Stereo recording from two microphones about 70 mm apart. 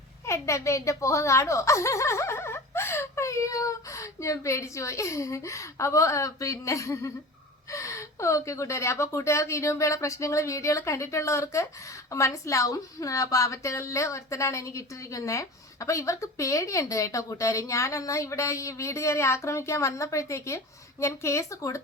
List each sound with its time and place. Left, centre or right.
0.3 s a woman's voice: left